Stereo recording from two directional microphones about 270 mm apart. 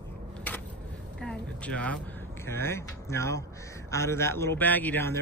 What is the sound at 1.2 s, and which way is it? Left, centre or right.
A man's voice, centre.